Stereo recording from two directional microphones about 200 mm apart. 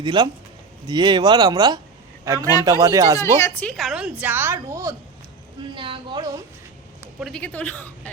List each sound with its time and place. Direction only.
0.0 s a man's voice: 20° right (ahead or behind)
3.2 s a woman's voice: 15° left (ahead or behind); by 4.9 s 15° right (ahead or behind)
5.7 s speech: 25° right (ahead or behind)
7.2 s a woman's voice: centre (ahead or behind)